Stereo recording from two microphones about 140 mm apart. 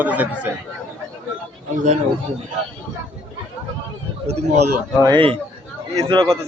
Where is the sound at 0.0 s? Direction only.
10° right (ahead or behind).